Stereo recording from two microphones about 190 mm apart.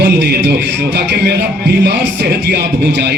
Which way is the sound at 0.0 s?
60° right (ahead or behind).